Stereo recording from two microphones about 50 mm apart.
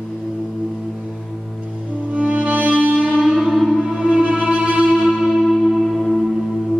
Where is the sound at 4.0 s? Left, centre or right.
Centre.